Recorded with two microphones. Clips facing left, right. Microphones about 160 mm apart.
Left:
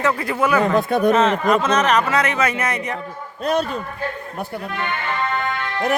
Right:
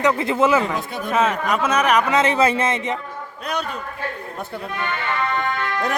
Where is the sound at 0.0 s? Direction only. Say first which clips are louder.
Right 2 dB; 25° right (ahead or behind).